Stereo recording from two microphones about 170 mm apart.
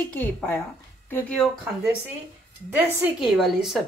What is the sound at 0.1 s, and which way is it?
Speech, 10° left (ahead or behind).